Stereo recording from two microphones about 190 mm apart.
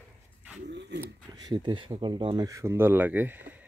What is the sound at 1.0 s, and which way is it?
Speech, 20° right (ahead or behind).